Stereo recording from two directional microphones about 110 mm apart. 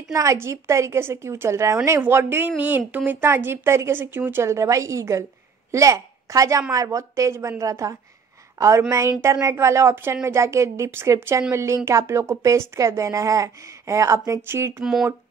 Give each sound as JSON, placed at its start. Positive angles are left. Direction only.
{"t": 0.1, "sound": "a woman's voice", "side_deg": -30}
{"t": 14.8, "sound": "speech", "side_deg": -5}